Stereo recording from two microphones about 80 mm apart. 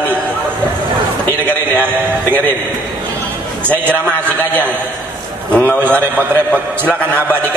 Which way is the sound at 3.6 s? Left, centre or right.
Right.